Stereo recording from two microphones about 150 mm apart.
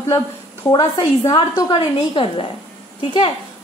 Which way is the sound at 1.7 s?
35° left (ahead or behind).